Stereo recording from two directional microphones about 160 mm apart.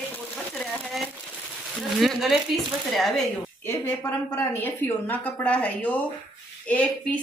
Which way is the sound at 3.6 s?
15° left (ahead or behind).